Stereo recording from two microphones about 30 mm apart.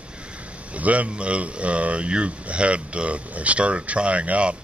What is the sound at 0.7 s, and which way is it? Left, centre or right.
Speech, right.